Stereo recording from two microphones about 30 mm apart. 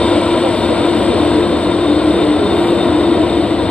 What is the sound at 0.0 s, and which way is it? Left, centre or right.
Vehicle, left.